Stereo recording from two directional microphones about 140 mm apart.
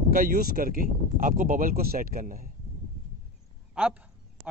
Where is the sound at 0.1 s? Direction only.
85° right.